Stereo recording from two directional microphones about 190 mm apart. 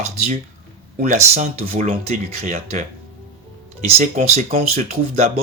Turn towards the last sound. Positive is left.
turn(degrees=-35)  # may be behind; listen again after turning